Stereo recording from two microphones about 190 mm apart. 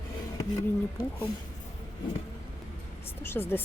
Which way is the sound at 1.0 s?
50° left (ahead or behind).